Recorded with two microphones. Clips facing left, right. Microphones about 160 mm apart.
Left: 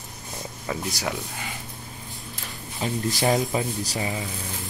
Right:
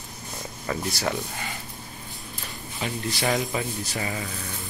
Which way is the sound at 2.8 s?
35° left (ahead or behind).